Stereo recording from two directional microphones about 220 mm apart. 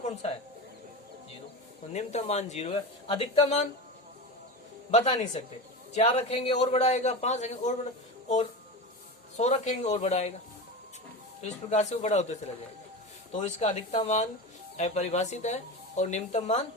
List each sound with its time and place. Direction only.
0.0 s a sound: 30° left (ahead or behind)
1.9 s speech: 30° left (ahead or behind)
4.9 s speech: 30° left (ahead or behind)
9.4 s speech: 30° left (ahead or behind)
11.7 s speech: 30° left (ahead or behind)